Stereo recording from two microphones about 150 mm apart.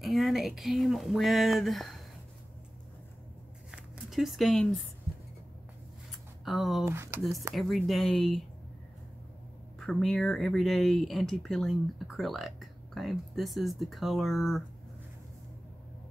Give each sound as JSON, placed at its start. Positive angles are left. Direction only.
{"t": 0.0, "sound": "speech", "side_deg": 0}
{"t": 3.7, "sound": "a sound", "side_deg": 0}
{"t": 6.4, "sound": "speech", "side_deg": 0}
{"t": 6.8, "sound": "speech", "side_deg": -15}
{"t": 7.5, "sound": "speech", "side_deg": 0}
{"t": 9.8, "sound": "speech", "side_deg": 5}